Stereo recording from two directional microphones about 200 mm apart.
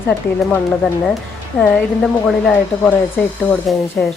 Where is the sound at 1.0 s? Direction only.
Centre (ahead or behind).